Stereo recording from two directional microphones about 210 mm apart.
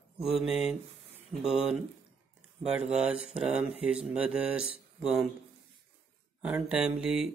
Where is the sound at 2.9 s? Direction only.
5° right (ahead or behind).